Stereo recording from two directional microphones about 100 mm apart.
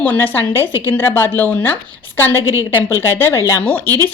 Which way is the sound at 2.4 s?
30° right (ahead or behind).